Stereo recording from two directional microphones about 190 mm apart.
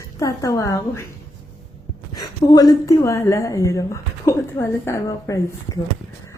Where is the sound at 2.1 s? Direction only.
20° left (ahead or behind).